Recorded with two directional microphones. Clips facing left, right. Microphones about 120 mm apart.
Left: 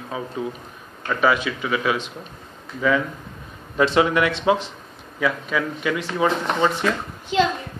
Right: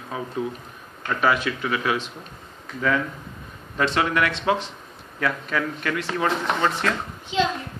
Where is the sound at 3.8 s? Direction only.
15° left (ahead or behind).